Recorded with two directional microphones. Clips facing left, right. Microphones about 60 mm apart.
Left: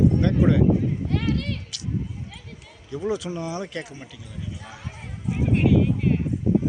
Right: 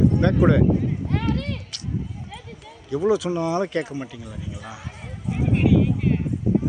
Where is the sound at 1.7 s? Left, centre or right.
Right.